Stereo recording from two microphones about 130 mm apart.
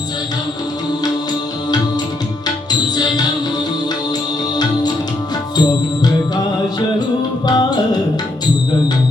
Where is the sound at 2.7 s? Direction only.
30° left (ahead or behind).